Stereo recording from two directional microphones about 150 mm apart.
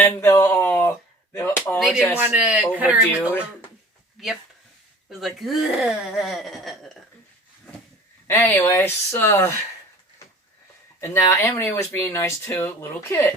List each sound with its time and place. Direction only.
0.0 s a sound: 15° left (ahead or behind)
1.8 s speech: centre (ahead or behind)
4.2 s speech: centre (ahead or behind)
8.3 s speech: 15° left (ahead or behind)
11.0 s speech: 15° left (ahead or behind)